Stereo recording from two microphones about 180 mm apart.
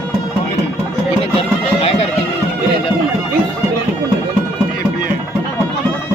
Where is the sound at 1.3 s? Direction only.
35° left (ahead or behind).